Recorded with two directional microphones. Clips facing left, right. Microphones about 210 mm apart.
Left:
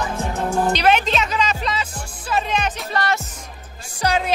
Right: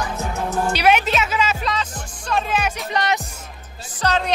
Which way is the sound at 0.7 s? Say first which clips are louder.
Right 2 dB; 10° right (ahead or behind).